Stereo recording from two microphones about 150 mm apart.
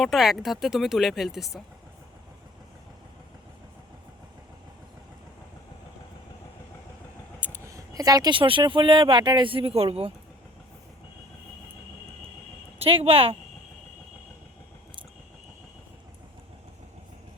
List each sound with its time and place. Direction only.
0.0 s speech: centre (ahead or behind)
7.4 s speech: 20° right (ahead or behind); by 10.1 s 40° right (ahead or behind)
12.8 s speech: 40° right (ahead or behind)